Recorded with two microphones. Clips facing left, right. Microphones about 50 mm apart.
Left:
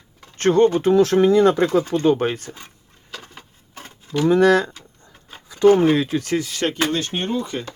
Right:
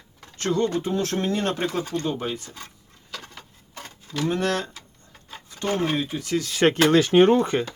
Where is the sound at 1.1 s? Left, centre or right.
Left.